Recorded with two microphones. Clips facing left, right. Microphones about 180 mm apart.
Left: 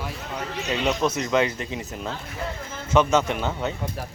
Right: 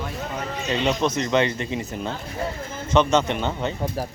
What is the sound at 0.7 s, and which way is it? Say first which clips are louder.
Speech: right 1 dB; 5° left (ahead or behind).